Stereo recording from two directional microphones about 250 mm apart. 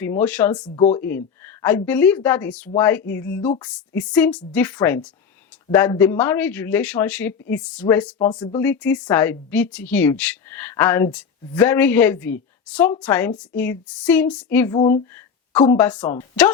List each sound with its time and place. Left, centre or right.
0.0 s a woman's voice: centre
0.5 s a woman's voice: left
1.6 s a woman's voice: centre
8.2 s a woman's voice: centre
14.8 s speech: left
15.6 s a woman's voice: centre